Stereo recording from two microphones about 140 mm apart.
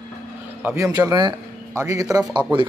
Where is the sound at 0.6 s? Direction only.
15° right (ahead or behind).